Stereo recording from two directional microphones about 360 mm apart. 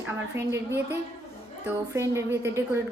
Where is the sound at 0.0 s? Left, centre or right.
Centre.